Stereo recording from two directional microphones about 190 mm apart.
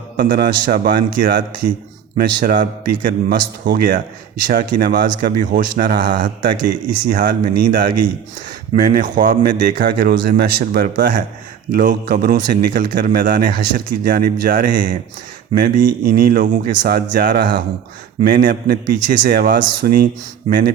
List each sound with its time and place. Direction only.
0.2 s speech: 50° right (ahead or behind)